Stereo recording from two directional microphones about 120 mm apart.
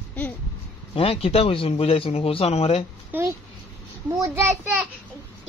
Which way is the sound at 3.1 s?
20° right (ahead or behind).